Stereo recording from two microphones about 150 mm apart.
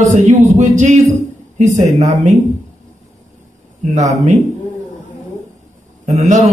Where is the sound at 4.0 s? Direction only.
50° right (ahead or behind).